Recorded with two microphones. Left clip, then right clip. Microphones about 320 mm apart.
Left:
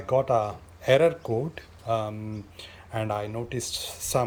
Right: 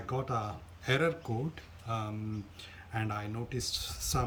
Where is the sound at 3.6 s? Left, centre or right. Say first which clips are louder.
Left 4 dB; centre.